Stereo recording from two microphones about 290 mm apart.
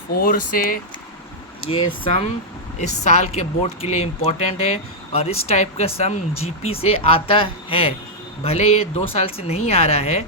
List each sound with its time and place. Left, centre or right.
0.1 s speech: left